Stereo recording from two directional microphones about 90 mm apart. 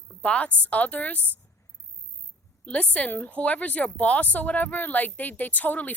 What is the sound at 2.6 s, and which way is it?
A woman's voice, 15° left (ahead or behind).